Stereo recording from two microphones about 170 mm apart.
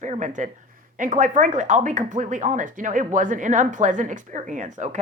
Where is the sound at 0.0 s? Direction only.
45° right (ahead or behind).